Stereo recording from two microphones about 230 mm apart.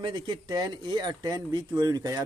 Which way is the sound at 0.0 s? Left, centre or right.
Centre.